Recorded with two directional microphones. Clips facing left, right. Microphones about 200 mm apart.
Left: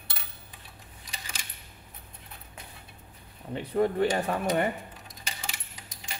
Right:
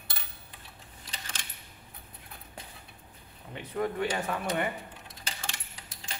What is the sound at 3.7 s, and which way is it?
Speech, 35° left (ahead or behind).